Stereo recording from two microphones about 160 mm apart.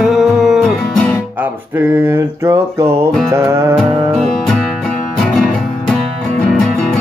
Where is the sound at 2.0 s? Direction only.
15° right (ahead or behind).